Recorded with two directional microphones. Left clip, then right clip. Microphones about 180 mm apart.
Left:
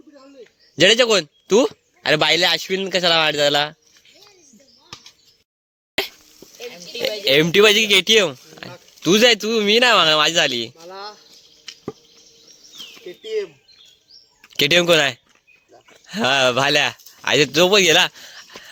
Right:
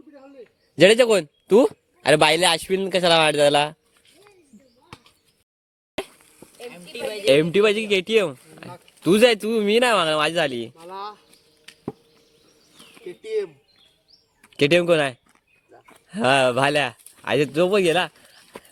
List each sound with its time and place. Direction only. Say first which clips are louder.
0.8 s speech: left 1 dB; 5° right (ahead or behind)
7.5 s speech: left 6 dB; 15° left (ahead or behind)
10.8 s speech: even; 25° right (ahead or behind)
13.1 s bird: left 1 dB; 30° right (ahead or behind)
14.5 s speech: left 3 dB; 5° left (ahead or behind)